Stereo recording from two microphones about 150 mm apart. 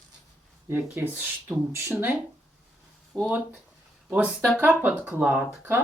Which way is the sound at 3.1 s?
Centre (ahead or behind).